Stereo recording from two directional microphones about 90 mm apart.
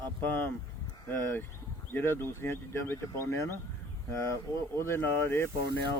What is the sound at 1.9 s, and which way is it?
A man's voice, 25° left (ahead or behind).